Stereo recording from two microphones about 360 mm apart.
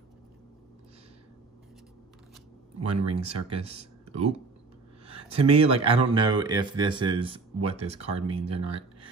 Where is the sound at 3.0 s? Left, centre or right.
Centre.